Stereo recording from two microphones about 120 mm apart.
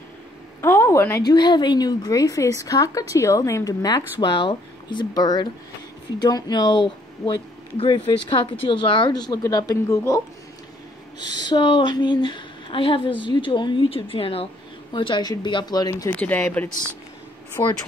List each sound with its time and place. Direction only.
0.6 s a sound: 20° left (ahead or behind)
1.2 s a woman's voice: 35° left (ahead or behind)
11.1 s a woman's voice: 35° left (ahead or behind)
14.9 s a woman's voice: 40° left (ahead or behind)
16.2 s speech: 15° left (ahead or behind)
17.6 s speech: 25° left (ahead or behind)